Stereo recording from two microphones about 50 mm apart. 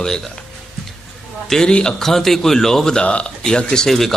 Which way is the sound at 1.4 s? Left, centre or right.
Centre.